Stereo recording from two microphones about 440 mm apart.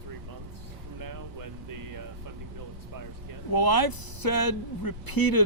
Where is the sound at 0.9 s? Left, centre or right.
Right.